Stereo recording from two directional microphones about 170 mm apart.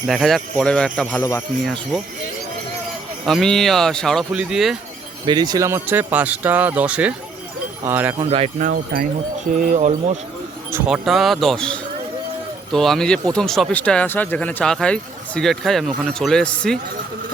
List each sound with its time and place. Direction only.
0.1 s speech: centre (ahead or behind)
3.2 s speech: centre (ahead or behind)
5.2 s speech: 25° right (ahead or behind); by 8.1 s 10° right (ahead or behind)
8.3 s speech: 35° right (ahead or behind)
8.6 s wind chime: 60° right (ahead or behind)
9.5 s speech: 45° right (ahead or behind)
10.7 s speech: 10° right (ahead or behind); by 16.7 s 5° left (ahead or behind)